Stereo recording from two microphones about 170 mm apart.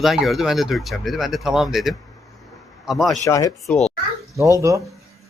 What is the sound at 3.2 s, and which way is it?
Speech, 20° left (ahead or behind).